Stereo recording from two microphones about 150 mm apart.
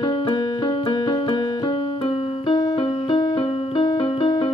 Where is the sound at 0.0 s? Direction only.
35° left (ahead or behind).